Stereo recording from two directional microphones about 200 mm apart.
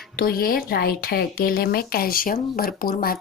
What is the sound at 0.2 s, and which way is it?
Speech, 50° left (ahead or behind).